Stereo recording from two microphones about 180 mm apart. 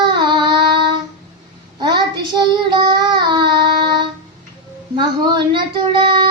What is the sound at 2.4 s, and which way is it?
Child singing, 25° right (ahead or behind).